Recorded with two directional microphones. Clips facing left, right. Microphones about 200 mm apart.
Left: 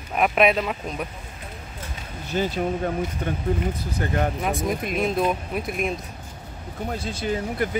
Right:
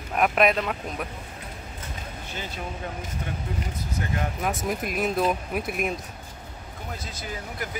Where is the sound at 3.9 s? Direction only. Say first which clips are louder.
Left 4 dB; 45° left (ahead or behind).